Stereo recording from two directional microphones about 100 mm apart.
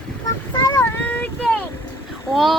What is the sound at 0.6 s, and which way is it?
Child singing, 45° left (ahead or behind).